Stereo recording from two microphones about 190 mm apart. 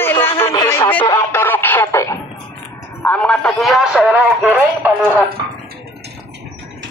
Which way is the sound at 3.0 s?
5° left (ahead or behind).